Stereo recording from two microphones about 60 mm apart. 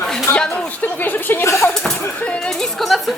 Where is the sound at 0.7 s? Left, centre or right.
Left.